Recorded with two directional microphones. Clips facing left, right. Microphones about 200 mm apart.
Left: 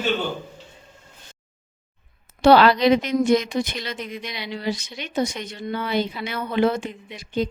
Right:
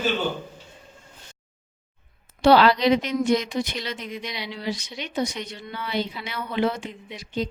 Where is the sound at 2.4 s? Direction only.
55° left (ahead or behind).